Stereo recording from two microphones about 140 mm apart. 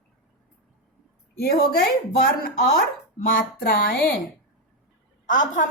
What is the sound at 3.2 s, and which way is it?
Speech, 90° left.